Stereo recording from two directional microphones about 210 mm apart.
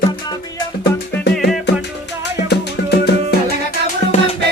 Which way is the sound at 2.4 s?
50° left (ahead or behind).